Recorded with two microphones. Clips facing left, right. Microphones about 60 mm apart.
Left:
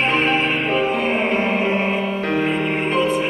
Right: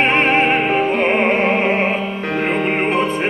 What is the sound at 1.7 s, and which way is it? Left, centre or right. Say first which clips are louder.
Music: right 3 dB; right.